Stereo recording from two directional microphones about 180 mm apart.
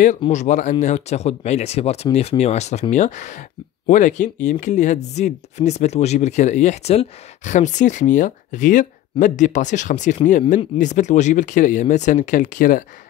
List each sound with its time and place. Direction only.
0.3 s speech: 40° left (ahead or behind)